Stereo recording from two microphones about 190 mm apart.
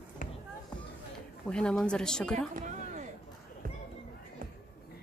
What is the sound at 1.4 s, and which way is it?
Speech, 5° left (ahead or behind).